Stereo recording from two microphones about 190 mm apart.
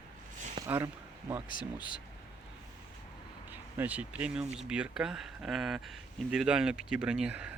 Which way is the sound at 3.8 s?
10° right (ahead or behind).